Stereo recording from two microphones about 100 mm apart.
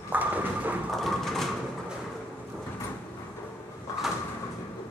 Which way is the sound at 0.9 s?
5° left (ahead or behind).